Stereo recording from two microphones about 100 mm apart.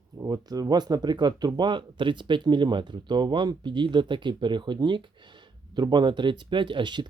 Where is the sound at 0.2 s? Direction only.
35° right (ahead or behind).